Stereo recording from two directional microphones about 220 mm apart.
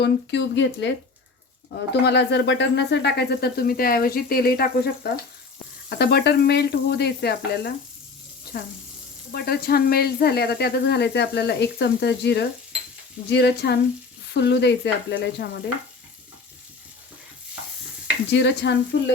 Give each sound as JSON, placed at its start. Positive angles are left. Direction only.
{"t": 0.0, "sound": "speech", "side_deg": 55}
{"t": 9.3, "sound": "speech", "side_deg": 45}
{"t": 18.3, "sound": "speech", "side_deg": 50}